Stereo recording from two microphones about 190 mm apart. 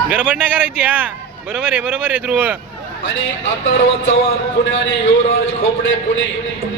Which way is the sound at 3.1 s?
85° left.